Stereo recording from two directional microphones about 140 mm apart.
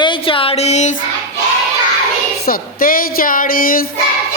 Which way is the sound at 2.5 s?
90° left.